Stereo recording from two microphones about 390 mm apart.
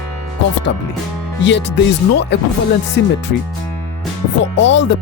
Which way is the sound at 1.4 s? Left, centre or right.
Left.